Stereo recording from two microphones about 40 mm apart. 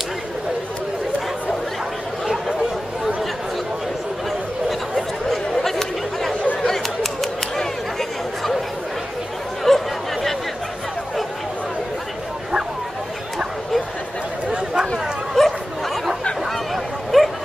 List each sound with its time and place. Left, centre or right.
4.6 s chatter: centre
9.7 s chatter: centre
14.5 s a sound: centre
15.3 s bow-wow: centre